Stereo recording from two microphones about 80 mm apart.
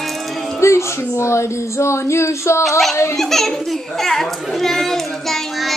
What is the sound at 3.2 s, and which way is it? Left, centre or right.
Speech, centre.